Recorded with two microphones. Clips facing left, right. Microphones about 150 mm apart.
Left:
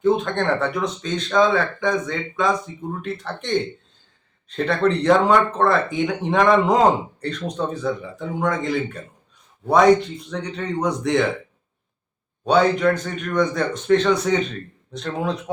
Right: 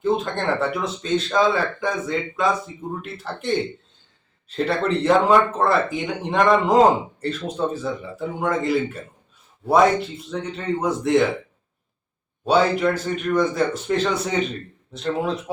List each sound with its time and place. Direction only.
0.0 s a man's voice: centre (ahead or behind)
12.5 s a man's voice: 5° right (ahead or behind)